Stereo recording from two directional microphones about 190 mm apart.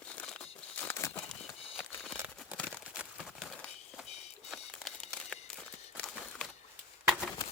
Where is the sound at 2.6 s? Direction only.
5° left (ahead or behind).